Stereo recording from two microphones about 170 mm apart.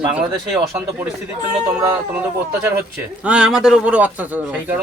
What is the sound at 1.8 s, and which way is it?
Speech, 15° right (ahead or behind).